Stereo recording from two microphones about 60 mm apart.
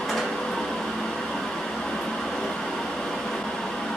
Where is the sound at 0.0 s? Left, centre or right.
Centre.